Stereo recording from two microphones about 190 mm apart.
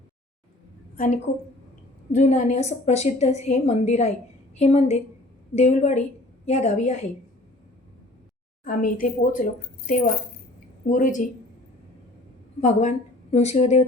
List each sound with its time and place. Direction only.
0.9 s a woman's voice: 45° left (ahead or behind)
8.6 s speech: 45° left (ahead or behind)
12.6 s a woman's voice: 35° left (ahead or behind)